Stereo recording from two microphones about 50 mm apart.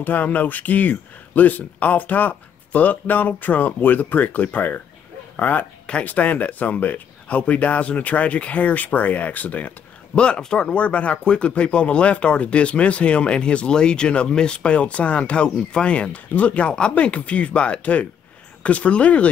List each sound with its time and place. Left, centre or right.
0.0 s speech: left